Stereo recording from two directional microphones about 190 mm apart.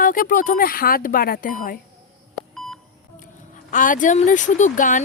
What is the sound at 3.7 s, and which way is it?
Speech, 45° left (ahead or behind).